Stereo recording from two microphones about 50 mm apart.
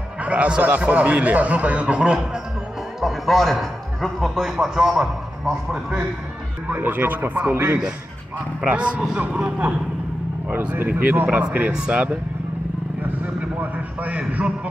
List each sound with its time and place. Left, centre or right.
0.2 s a man's voice: right
3.0 s a man's voice: centre
4.6 s a man's voice: centre
6.7 s speech: right
8.6 s a man's voice: right
10.9 s speech: right
11.7 s a man's voice: centre
13.2 s a man's voice: right